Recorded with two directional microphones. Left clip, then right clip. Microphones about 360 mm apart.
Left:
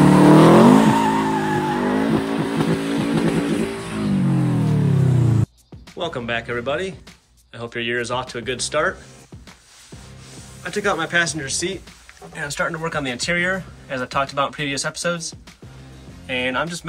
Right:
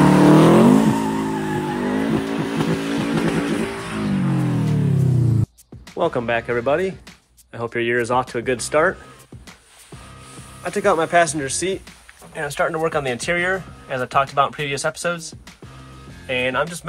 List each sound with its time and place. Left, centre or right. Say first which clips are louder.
0.0 s vehicle: left 1 dB; centre
5.9 s speech: right 5 dB; centre
10.6 s speech: right 3 dB; centre